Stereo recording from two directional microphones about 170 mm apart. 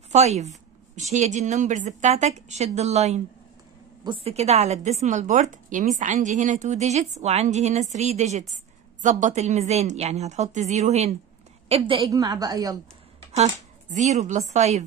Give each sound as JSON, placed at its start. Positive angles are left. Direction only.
{"t": 0.1, "sound": "a woman's voice", "side_deg": -40}
{"t": 12.1, "sound": "a woman's voice", "side_deg": -20}
{"t": 13.3, "sound": "a woman's voice", "side_deg": -40}